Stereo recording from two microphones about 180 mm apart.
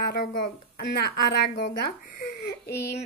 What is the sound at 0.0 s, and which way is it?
A woman's voice, 60° left (ahead or behind).